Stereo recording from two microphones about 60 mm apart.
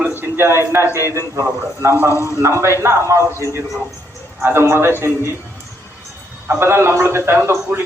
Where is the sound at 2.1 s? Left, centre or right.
Left.